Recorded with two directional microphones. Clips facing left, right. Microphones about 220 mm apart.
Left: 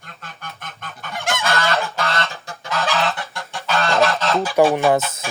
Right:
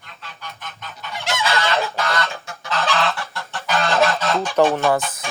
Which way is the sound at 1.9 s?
30° left (ahead or behind).